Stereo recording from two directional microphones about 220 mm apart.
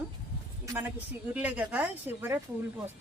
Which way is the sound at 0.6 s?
15° right (ahead or behind).